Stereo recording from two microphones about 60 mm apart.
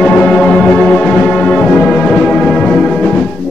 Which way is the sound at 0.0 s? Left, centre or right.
Centre.